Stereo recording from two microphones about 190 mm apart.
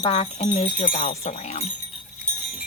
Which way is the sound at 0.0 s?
30° left (ahead or behind).